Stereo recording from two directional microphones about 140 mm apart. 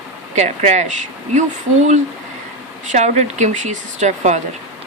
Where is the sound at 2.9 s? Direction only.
55° right (ahead or behind).